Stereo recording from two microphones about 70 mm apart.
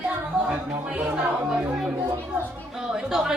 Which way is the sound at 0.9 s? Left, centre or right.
Right.